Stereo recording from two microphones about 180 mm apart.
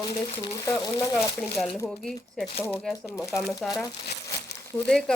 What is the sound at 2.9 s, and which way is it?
Speech, 15° left (ahead or behind).